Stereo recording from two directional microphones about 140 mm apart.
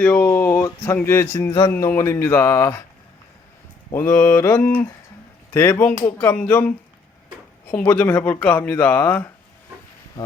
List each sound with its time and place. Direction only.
0.0 s speech: 15° left (ahead or behind)
1.5 s a man's voice: 35° left (ahead or behind)
2.0 s speech: 20° left (ahead or behind)
3.9 s speech: 15° left (ahead or behind)